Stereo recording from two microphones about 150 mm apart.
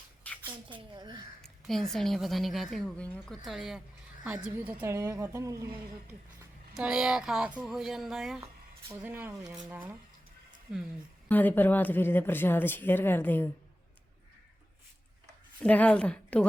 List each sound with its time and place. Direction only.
0.2 s a sound: 10° left (ahead or behind)
0.7 s a woman's voice: 30° right (ahead or behind)
1.4 s a woman's voice: centre (ahead or behind); by 5.6 s 20° right (ahead or behind)
6.7 s speech: 5° right (ahead or behind)
9.0 s a woman's voice: 15° right (ahead or behind)
11.3 s speech: 10° left (ahead or behind)
15.6 s speech: 10° left (ahead or behind)